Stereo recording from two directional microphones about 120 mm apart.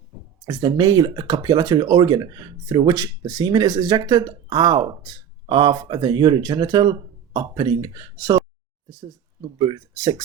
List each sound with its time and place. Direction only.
0.4 s speech: 35° right (ahead or behind)
9.4 s speech: 40° right (ahead or behind)